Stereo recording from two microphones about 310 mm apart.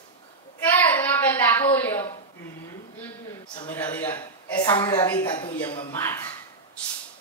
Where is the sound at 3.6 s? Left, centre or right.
Centre.